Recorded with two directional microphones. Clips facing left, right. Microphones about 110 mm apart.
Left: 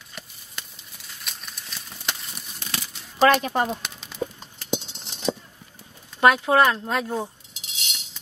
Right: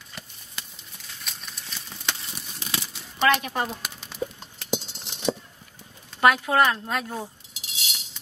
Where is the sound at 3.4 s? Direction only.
40° left (ahead or behind).